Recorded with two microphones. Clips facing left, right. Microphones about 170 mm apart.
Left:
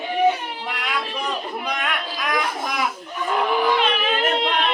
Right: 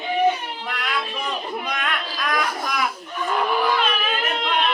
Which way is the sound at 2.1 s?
20° left (ahead or behind).